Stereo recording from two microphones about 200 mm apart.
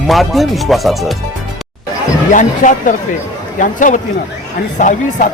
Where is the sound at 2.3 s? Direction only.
40° left (ahead or behind).